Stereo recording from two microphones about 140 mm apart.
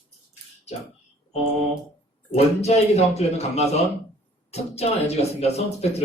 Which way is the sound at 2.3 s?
50° left (ahead or behind).